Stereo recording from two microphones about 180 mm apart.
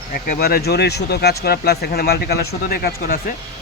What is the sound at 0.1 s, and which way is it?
Speech, 55° left (ahead or behind).